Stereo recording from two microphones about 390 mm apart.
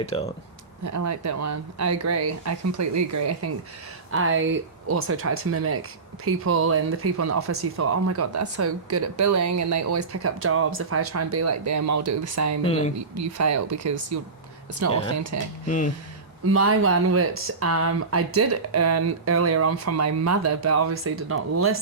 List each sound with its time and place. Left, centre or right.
0.0 s speech: centre
0.9 s speech: right
4.1 s speech: right
12.6 s speech: centre
13.1 s speech: right
15.1 s speech: right
15.6 s speech: centre
16.5 s speech: right